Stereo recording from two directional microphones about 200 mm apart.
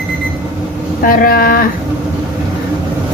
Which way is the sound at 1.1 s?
50° left (ahead or behind).